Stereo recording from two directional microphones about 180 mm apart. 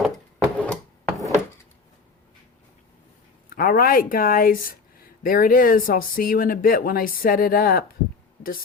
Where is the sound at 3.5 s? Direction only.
55° left (ahead or behind).